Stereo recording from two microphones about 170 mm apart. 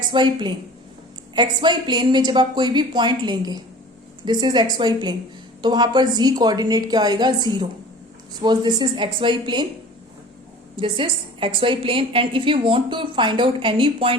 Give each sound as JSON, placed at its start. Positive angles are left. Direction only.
{"t": 0.1, "sound": "a woman's voice", "side_deg": -25}
{"t": 8.4, "sound": "a woman's voice", "side_deg": -25}
{"t": 10.8, "sound": "a woman's voice", "side_deg": -30}